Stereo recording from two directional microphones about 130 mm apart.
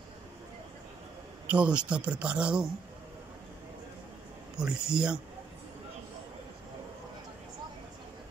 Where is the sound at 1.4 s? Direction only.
10° right (ahead or behind).